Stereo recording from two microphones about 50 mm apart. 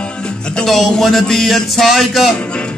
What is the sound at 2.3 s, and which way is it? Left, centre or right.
Speech, left.